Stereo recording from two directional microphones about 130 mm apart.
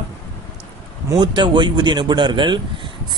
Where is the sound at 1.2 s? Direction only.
35° right (ahead or behind).